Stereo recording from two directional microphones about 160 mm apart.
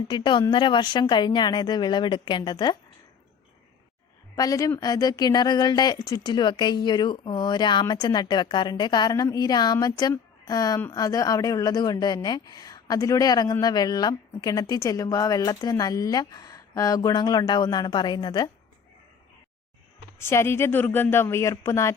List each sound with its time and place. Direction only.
0.1 s speech: 30° left (ahead or behind)
4.4 s speech: 20° left (ahead or behind)
20.1 s speech: 15° left (ahead or behind)